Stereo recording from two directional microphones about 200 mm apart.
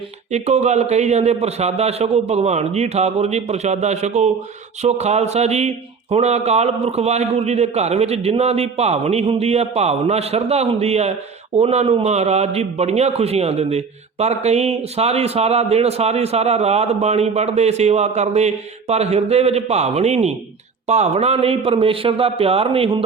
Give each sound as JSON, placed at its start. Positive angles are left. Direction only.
{"t": 0.3, "sound": "a man's voice", "side_deg": -35}